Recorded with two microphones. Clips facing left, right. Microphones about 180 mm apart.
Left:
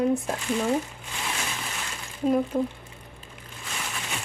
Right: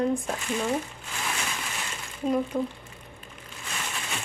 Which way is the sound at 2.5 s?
15° left (ahead or behind).